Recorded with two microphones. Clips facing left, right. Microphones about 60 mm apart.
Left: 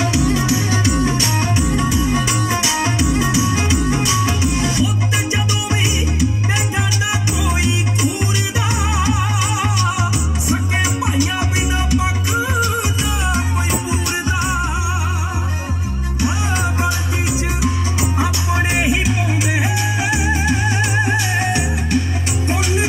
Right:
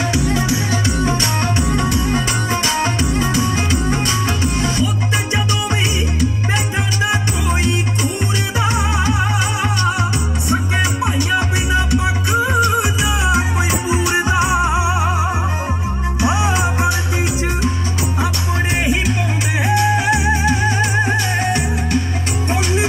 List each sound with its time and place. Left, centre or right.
0.0 s music: right
1.4 s music: centre
2.2 s music: right
3.1 s music: centre
8.5 s music: centre
13.8 s music: centre
14.5 s music: right
16.4 s music: centre
18.2 s music: centre